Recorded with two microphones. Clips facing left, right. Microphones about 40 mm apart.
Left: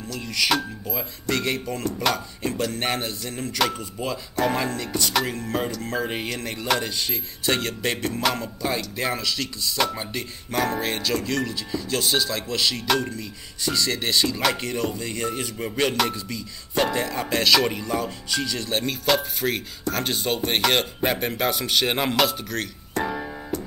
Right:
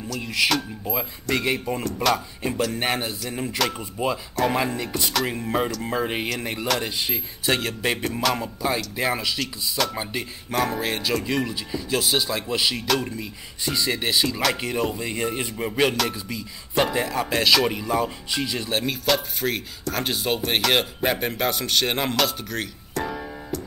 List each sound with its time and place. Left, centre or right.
0.2 s speech: centre
7.4 s speech: centre
18.7 s speech: centre
22.9 s keyboard: centre